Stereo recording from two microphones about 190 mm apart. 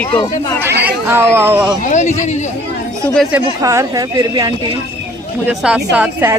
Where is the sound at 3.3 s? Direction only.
10° right (ahead or behind).